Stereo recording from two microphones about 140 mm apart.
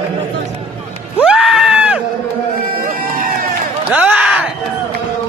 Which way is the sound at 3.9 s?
10° right (ahead or behind).